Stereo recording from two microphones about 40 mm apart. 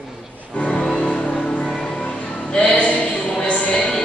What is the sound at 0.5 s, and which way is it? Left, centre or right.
Music, left.